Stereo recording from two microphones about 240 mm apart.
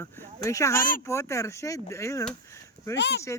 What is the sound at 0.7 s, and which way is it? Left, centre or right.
Speech, left.